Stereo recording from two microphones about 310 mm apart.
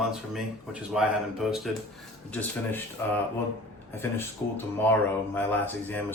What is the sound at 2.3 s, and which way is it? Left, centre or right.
Speech, centre.